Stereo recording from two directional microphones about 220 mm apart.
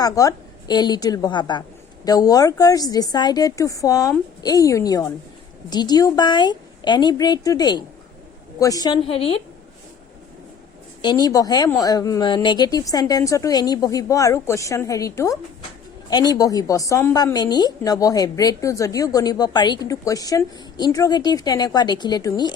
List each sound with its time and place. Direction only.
0.0 s a woman's voice: 15° left (ahead or behind)
11.0 s a woman's voice: 20° left (ahead or behind)